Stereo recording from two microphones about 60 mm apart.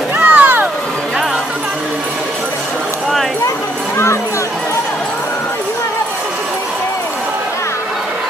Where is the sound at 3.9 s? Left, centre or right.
Left.